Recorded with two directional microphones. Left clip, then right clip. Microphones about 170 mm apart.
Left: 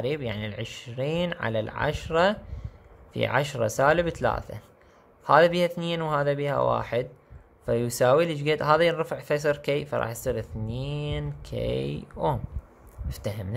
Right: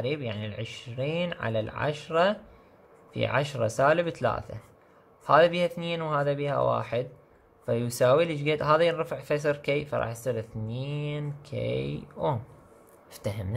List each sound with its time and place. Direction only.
0.0 s speech: 15° left (ahead or behind)